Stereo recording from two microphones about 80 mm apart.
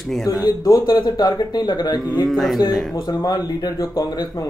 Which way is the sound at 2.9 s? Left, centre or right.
Left.